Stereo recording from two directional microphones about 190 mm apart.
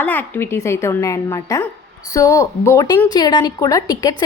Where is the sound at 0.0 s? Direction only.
10° left (ahead or behind).